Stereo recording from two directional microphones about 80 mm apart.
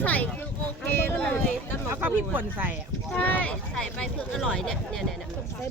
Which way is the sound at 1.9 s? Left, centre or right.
Right.